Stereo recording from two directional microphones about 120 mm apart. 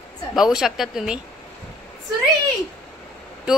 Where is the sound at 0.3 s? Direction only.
5° right (ahead or behind).